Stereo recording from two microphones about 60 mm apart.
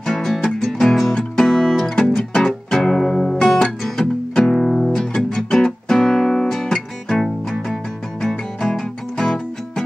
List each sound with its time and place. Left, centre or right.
0.0 s music: centre